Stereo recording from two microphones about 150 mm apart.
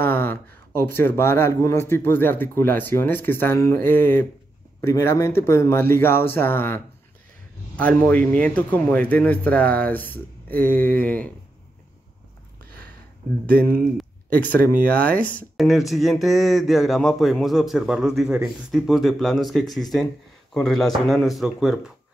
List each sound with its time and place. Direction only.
0.0 s speech: 15° left (ahead or behind)
13.5 s speech: 10° left (ahead or behind)
15.5 s speech: centre (ahead or behind)